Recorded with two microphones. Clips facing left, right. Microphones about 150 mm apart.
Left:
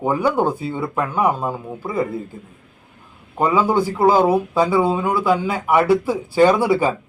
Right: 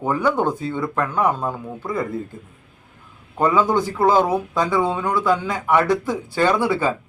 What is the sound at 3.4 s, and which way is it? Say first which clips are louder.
Speech: left 1 dB; 10° left (ahead or behind).